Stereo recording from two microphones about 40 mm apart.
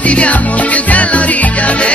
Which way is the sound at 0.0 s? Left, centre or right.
Left.